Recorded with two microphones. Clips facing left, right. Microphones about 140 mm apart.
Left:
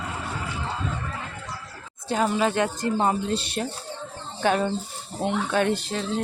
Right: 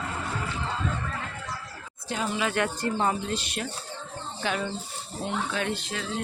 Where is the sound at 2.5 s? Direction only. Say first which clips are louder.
Left 3 dB; 20° left (ahead or behind).